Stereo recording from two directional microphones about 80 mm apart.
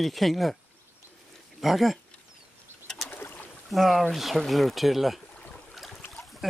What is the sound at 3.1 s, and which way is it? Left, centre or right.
Boat, left.